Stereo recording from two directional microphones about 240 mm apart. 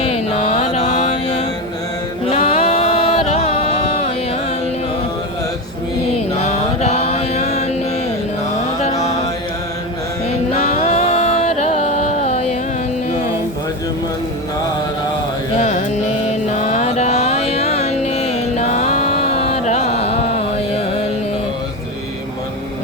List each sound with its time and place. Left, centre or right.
0.0 s mantra: left
2.3 s music: left
6.4 s mantra: left
10.6 s music: left
15.5 s mantra: left
19.3 s carnatic music: left